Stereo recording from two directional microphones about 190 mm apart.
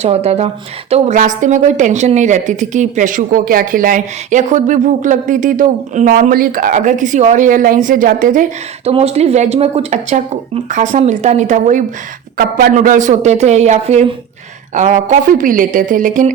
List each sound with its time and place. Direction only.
0.0 s a woman's voice: 35° right (ahead or behind)
8.9 s a woman's voice: 35° right (ahead or behind)